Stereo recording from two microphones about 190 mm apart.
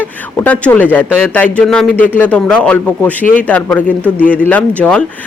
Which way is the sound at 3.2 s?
45° left (ahead or behind).